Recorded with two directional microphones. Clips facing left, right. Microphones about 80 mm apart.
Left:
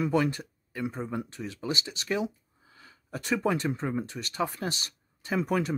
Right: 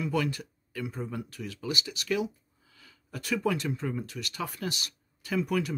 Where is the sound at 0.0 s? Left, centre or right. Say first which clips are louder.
Left 4 dB; left.